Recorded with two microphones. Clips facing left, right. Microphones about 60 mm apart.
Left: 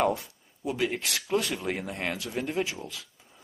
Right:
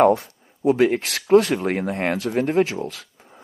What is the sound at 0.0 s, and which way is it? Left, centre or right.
Speech, right.